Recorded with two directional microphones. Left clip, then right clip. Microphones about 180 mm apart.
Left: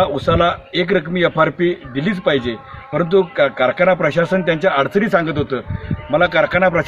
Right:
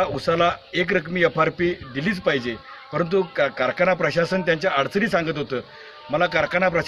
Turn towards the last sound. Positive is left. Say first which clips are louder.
# left 6 dB
turn(degrees=-15)  # may be behind; listen again after turning